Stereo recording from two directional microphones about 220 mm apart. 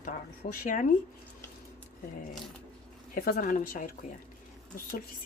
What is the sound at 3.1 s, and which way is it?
Speech, 40° left (ahead or behind).